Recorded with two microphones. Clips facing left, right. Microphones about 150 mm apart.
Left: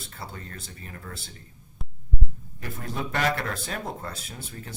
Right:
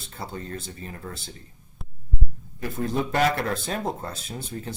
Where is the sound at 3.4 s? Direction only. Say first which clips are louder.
Right 5 dB; 25° right (ahead or behind).